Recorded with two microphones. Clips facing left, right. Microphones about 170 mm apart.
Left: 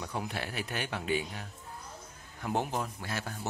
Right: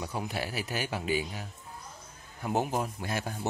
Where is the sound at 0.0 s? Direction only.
5° right (ahead or behind).